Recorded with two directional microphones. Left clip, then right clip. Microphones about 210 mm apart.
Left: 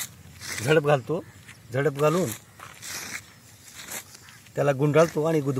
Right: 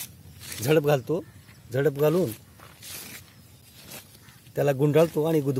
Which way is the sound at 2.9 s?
10° right (ahead or behind).